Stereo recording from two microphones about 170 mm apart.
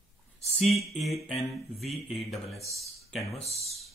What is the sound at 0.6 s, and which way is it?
Music, centre (ahead or behind).